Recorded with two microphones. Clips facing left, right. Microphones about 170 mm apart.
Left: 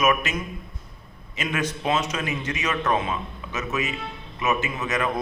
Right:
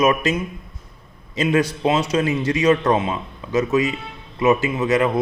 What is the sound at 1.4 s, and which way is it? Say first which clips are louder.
A man's voice: right 9 dB; 30° right (ahead or behind).